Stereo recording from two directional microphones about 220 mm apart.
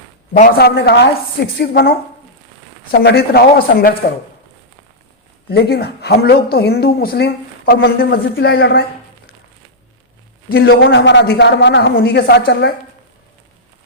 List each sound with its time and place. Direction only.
0.3 s speech: 40° left (ahead or behind)
5.5 s speech: 45° left (ahead or behind)
10.5 s speech: 45° left (ahead or behind)